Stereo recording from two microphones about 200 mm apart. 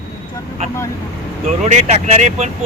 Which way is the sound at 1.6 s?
35° right (ahead or behind).